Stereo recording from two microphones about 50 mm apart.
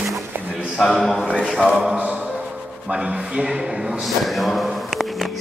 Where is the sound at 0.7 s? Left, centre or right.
Centre.